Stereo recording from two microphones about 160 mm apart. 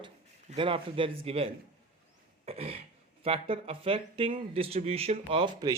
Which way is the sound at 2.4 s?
35° right (ahead or behind).